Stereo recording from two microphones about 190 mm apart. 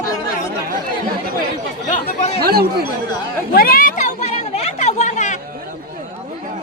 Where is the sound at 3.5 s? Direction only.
50° left (ahead or behind).